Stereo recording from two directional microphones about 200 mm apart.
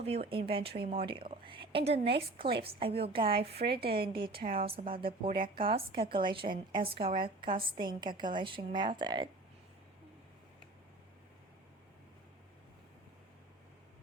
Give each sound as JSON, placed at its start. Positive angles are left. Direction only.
{"t": 0.0, "sound": "a woman's voice", "side_deg": -30}
{"t": 0.7, "sound": "speech", "side_deg": -50}
{"t": 0.9, "sound": "a woman's voice", "side_deg": -25}
{"t": 3.5, "sound": "speech", "side_deg": -55}
{"t": 3.9, "sound": "a woman's voice", "side_deg": -25}
{"t": 4.4, "sound": "speech", "side_deg": -45}
{"t": 4.6, "sound": "a woman's voice", "side_deg": -30}